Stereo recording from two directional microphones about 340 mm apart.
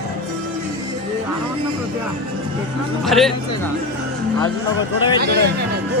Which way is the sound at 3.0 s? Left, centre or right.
Centre.